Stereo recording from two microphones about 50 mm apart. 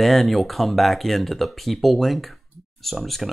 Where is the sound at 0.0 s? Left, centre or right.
Centre.